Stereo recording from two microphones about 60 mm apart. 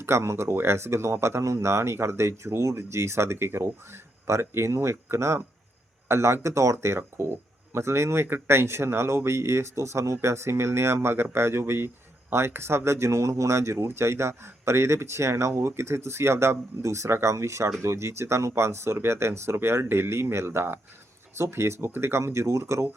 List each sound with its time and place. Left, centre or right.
0.0 s speech: right